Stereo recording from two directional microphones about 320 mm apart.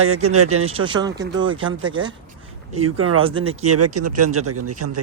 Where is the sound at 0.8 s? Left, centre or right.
Centre.